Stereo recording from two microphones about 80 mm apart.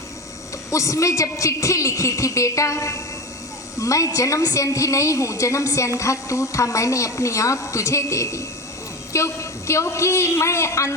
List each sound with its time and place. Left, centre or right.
0.7 s a woman's voice: left